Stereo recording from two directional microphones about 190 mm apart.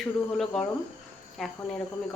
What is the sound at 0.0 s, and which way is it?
Speech, centre (ahead or behind).